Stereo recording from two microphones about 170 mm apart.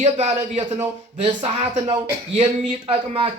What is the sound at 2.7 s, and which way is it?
Speech, 30° right (ahead or behind).